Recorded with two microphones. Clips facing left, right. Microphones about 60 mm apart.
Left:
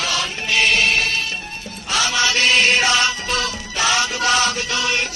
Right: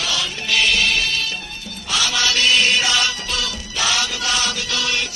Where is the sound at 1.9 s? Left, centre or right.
Left.